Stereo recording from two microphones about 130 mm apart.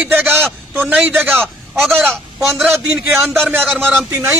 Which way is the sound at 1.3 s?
5° left (ahead or behind).